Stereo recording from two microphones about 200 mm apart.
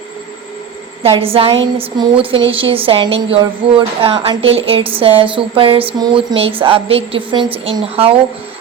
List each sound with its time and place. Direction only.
1.0 s a woman's voice: 30° right (ahead or behind)